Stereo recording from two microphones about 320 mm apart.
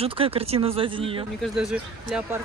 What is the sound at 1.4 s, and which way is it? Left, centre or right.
Speech, centre.